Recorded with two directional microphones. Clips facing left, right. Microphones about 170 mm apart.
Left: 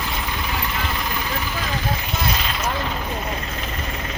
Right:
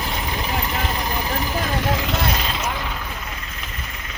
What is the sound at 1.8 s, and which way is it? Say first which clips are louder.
Vehicle: right 4 dB; 85° right.